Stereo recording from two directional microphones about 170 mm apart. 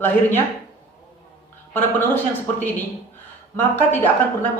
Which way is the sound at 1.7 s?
10° left (ahead or behind).